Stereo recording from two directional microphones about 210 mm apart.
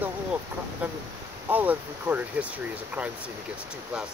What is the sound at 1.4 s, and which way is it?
Speech, 10° right (ahead or behind).